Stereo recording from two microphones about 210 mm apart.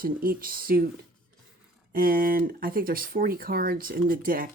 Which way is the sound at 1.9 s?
45° right (ahead or behind).